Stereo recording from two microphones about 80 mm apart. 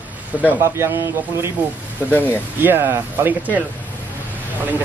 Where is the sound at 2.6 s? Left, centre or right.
Right.